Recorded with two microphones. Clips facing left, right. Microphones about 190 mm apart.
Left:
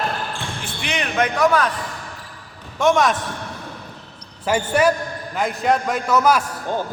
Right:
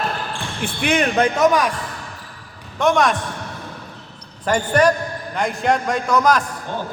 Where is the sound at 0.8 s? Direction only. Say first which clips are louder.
Right 8 dB; 50° right (ahead or behind).